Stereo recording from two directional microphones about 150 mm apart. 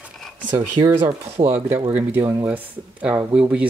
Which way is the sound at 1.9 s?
10° right (ahead or behind).